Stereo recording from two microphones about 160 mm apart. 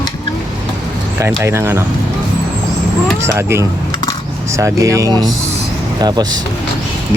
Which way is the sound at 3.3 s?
15° right (ahead or behind).